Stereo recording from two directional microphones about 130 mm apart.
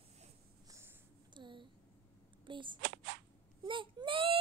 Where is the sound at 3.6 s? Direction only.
40° right (ahead or behind).